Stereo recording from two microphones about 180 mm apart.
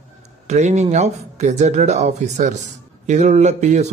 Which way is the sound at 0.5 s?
40° right (ahead or behind).